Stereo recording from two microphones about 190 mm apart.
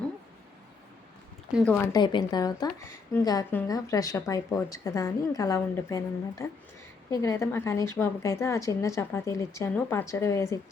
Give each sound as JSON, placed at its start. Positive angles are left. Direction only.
{"t": 1.6, "sound": "a woman's voice", "side_deg": 10}